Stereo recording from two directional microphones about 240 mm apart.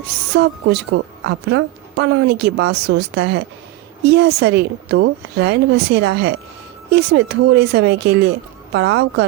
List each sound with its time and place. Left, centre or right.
0.3 s speech: right